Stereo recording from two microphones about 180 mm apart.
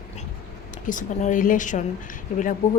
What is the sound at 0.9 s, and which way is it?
Speech, 45° left (ahead or behind).